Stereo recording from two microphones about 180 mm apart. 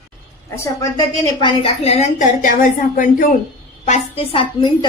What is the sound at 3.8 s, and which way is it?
Speech, 35° left (ahead or behind).